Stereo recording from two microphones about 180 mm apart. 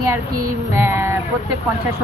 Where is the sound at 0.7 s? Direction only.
15° right (ahead or behind).